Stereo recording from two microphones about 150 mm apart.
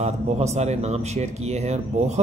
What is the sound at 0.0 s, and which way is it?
Speech, 50° right (ahead or behind).